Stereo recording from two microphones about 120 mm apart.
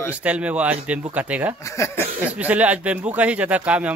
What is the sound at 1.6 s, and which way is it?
Speech, 25° left (ahead or behind).